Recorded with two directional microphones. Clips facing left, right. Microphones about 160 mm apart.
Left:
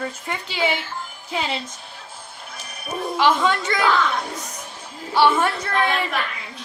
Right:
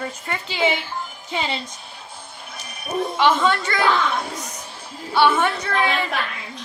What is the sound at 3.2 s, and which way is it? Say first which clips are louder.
Speech: even; centre (ahead or behind).